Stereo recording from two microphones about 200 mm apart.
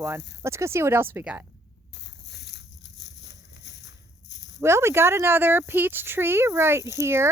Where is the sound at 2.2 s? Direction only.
60° left (ahead or behind).